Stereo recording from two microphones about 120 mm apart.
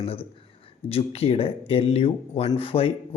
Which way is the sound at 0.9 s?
55° left (ahead or behind).